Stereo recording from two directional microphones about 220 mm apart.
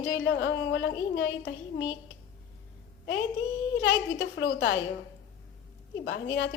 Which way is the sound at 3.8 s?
55° left (ahead or behind).